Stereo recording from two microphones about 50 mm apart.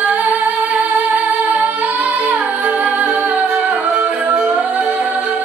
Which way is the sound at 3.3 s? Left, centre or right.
Right.